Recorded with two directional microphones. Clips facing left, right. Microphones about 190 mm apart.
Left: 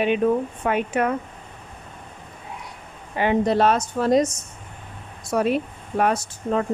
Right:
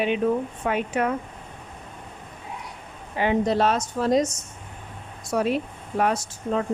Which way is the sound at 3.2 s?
60° left (ahead or behind).